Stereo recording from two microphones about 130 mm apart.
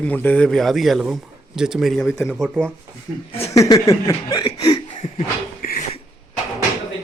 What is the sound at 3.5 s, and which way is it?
Speech, 25° left (ahead or behind).